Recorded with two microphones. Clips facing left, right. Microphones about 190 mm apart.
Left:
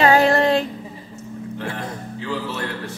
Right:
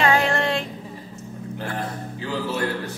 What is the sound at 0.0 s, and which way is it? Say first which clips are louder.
Female singing: left 5 dB; 35° left (ahead or behind).